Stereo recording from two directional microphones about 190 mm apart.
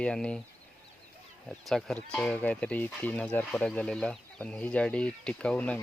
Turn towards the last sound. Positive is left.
turn(degrees=5)  # may be behind; listen again after turning